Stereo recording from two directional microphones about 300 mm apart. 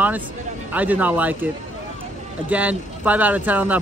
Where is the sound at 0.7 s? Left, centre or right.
Centre.